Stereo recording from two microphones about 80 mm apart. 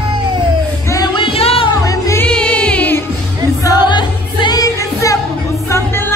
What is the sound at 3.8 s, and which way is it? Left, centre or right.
Music, left.